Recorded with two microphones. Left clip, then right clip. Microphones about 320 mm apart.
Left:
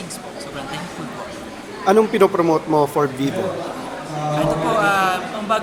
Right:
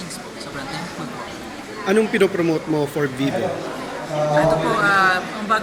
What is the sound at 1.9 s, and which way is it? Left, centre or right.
Speech, centre.